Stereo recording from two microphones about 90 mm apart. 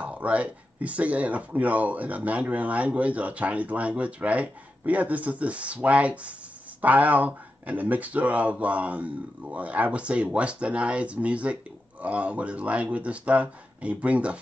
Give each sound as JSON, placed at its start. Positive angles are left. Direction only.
{"t": 0.0, "sound": "speech", "side_deg": -15}